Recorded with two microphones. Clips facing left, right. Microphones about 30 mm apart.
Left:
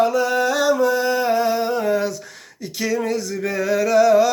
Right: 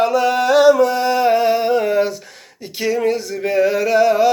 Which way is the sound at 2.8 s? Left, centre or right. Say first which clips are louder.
Right 4 dB; right.